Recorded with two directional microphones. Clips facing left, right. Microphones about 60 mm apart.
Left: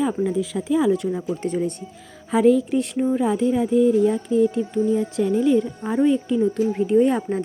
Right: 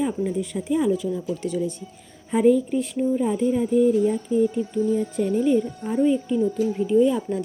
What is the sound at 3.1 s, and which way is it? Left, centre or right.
Speech, left.